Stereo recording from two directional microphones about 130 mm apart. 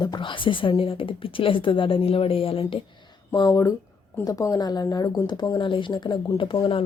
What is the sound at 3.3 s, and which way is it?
Speech, 25° left (ahead or behind).